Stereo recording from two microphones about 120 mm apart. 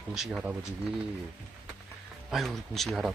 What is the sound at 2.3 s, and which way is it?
Speech, centre (ahead or behind).